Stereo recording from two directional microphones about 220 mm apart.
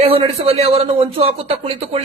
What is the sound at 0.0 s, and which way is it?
Speech, 25° right (ahead or behind).